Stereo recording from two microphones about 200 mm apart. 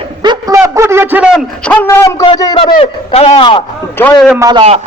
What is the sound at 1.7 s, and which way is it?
A man's voice, 10° left (ahead or behind).